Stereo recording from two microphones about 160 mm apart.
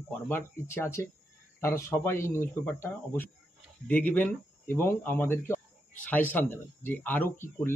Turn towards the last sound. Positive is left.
turn(degrees=15)  # may be behind; listen again after turning